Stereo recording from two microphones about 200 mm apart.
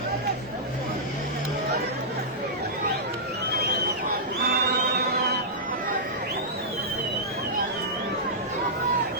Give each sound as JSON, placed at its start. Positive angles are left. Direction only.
{"t": 4.4, "sound": "music", "side_deg": -50}